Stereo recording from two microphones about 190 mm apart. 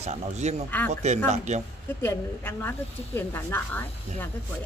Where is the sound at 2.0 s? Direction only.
10° left (ahead or behind).